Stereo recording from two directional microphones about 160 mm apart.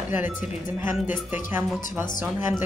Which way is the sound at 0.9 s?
Centre (ahead or behind).